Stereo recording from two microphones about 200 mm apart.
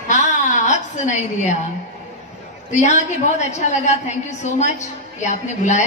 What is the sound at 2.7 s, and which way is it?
A woman's voice, 35° left (ahead or behind).